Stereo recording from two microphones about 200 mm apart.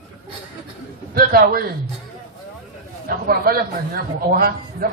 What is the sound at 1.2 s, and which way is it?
Speech, 50° right (ahead or behind).